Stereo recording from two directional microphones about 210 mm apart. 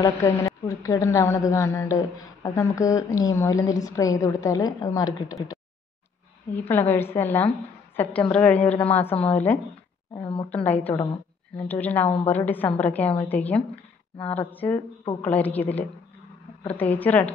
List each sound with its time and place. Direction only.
0.0 s a woman's voice: 15° left (ahead or behind)
10.1 s a woman's voice: 25° left (ahead or behind)
10.5 s a woman's voice: 10° left (ahead or behind)
16.9 s a woman's voice: 10° left (ahead or behind)